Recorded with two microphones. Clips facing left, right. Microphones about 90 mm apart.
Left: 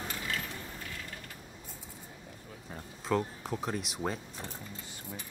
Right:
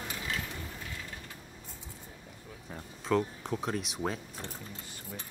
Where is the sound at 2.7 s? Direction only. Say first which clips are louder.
Right 2 dB; 5° left (ahead or behind).